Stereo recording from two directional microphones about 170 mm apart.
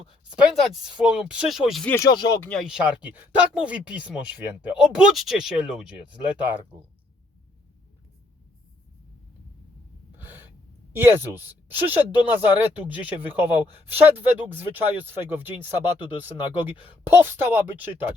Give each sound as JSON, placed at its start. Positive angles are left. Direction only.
{"t": 0.3, "sound": "speech", "side_deg": 0}
{"t": 2.0, "sound": "speech", "side_deg": 25}
{"t": 2.4, "sound": "speech", "side_deg": 0}
{"t": 10.2, "sound": "gasp", "side_deg": -10}
{"t": 10.9, "sound": "speech", "side_deg": -10}